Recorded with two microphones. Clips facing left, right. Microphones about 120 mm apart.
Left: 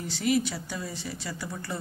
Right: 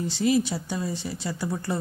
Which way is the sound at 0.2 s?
25° right (ahead or behind).